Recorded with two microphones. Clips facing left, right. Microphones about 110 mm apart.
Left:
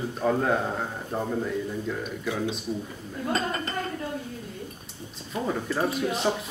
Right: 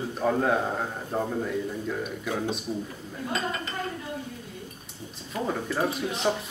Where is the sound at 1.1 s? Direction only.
10° right (ahead or behind).